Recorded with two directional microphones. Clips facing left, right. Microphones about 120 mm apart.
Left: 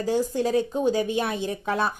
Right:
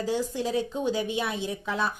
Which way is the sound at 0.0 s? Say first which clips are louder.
Left 4 dB; 45° left (ahead or behind).